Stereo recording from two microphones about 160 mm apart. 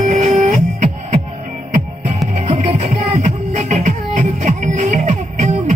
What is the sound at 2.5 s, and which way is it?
Music, 50° right (ahead or behind).